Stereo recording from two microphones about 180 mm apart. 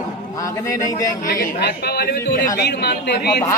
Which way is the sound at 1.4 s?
65° left (ahead or behind).